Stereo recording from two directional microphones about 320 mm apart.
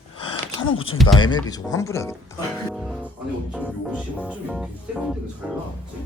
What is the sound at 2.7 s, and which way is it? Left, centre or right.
Music, centre.